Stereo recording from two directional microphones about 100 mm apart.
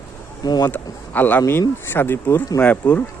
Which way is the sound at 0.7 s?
20° left (ahead or behind).